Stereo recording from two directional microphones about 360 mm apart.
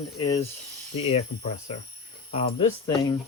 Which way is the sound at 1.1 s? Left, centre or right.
Centre.